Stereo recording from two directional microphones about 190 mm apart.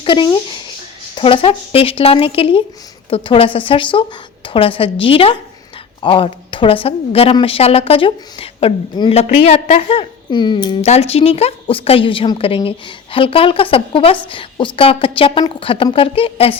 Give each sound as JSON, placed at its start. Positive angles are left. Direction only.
{"t": 0.0, "sound": "a woman's voice", "side_deg": 25}